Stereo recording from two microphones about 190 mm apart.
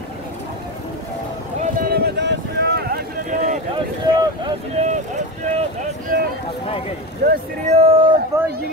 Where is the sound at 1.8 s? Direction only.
55° right (ahead or behind).